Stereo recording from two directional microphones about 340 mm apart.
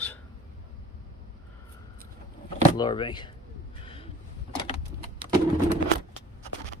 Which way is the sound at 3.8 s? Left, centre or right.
Centre.